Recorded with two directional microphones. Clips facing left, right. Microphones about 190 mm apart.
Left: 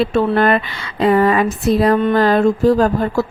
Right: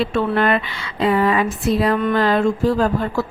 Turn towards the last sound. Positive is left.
turn(degrees=40)  # may be behind; listen again after turning